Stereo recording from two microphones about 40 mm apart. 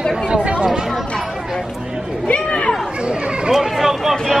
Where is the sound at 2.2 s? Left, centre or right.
Left.